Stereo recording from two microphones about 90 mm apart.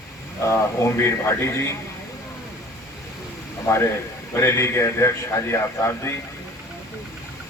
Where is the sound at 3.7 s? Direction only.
30° left (ahead or behind).